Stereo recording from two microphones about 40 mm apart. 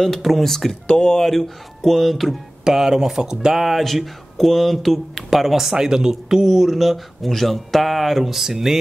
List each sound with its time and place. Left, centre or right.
0.0 s speech: centre
2.6 s speech: centre